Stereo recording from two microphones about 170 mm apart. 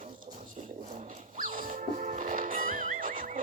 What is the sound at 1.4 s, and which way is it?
Music, 55° right (ahead or behind).